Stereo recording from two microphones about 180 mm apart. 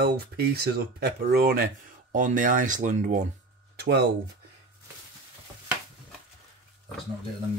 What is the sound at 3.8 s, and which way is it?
Speech, 65° right (ahead or behind).